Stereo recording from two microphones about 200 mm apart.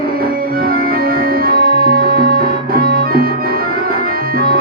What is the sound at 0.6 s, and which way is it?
Organ, 45° right (ahead or behind).